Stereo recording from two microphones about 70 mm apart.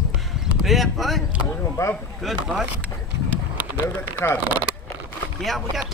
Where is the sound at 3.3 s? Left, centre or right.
Right.